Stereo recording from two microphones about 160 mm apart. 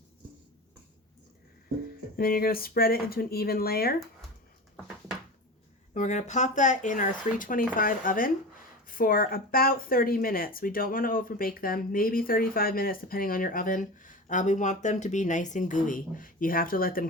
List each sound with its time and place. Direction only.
2.1 s speech: 65° left (ahead or behind)
5.9 s speech: 50° left (ahead or behind); by 17.1 s 65° left (ahead or behind)